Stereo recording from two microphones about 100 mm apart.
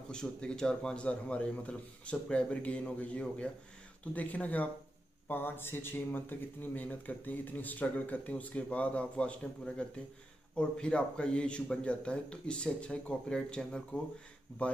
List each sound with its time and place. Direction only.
0.1 s speech: 5° left (ahead or behind)